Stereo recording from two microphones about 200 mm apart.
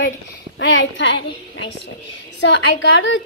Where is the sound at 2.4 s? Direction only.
65° left (ahead or behind).